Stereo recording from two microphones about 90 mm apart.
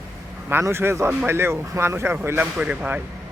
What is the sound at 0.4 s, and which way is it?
Speech, 25° right (ahead or behind).